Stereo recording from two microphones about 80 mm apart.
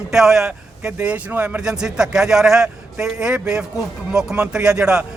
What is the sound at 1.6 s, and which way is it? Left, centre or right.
A man's voice, centre.